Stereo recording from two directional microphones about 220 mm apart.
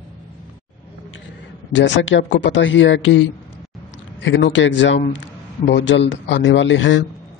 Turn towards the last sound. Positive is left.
turn(degrees=55)  # may be behind; listen again after turning